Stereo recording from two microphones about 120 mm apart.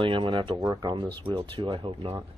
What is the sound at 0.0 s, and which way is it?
Speech, 45° right (ahead or behind).